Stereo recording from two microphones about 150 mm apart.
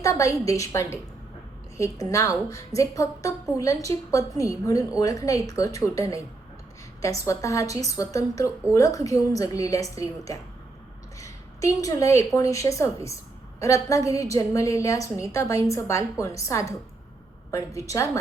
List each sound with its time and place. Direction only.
0.0 s a woman's voice: 20° left (ahead or behind)
17.7 s a woman's voice: 20° left (ahead or behind)